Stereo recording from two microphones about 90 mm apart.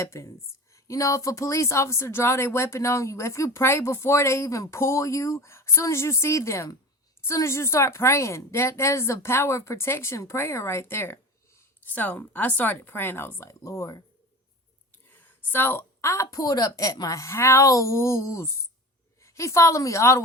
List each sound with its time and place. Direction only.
0.0 s a woman's voice: 35° left (ahead or behind)
13.5 s a woman's voice: 35° left (ahead or behind)
14.9 s a woman's voice: 20° left (ahead or behind)